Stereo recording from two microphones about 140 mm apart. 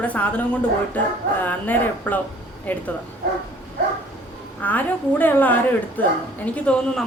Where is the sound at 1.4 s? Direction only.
10° left (ahead or behind).